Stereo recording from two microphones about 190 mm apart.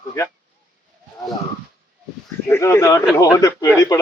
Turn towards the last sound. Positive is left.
turn(degrees=15)  # may be behind; listen again after turning